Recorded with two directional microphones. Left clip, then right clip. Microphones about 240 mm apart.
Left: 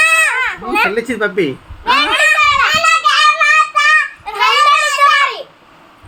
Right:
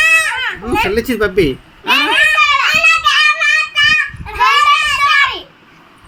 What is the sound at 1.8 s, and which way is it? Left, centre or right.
Children playing, centre.